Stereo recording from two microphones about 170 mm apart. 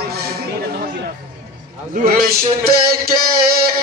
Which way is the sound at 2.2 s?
65° right (ahead or behind).